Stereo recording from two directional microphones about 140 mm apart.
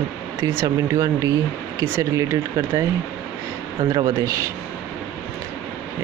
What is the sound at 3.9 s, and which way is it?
Speech, 25° right (ahead or behind).